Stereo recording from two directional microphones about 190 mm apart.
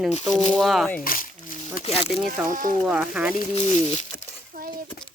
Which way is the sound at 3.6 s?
35° left (ahead or behind).